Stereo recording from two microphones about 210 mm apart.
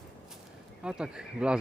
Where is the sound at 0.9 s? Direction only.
5° right (ahead or behind).